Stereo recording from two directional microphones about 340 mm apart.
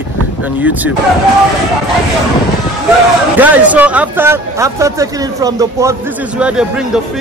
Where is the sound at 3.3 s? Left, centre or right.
Centre.